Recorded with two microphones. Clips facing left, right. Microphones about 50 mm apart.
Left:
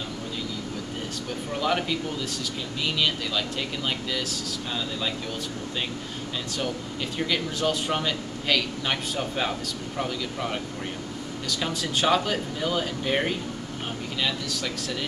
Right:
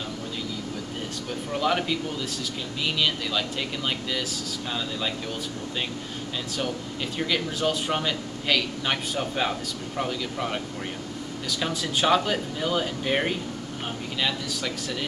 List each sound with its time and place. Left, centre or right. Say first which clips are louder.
1.5 s a man's voice: right 1 dB; centre
7.2 s a man's voice: even; centre